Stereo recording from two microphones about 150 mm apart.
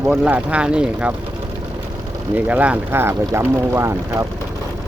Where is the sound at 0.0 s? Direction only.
10° right (ahead or behind).